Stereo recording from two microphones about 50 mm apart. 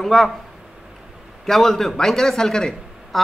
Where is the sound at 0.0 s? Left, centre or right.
Centre.